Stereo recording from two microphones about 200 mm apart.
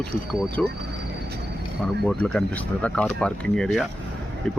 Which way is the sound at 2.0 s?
5° left (ahead or behind).